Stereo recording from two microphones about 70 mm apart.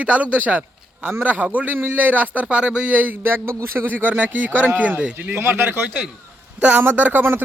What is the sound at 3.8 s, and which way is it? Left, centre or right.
A man's voice, right.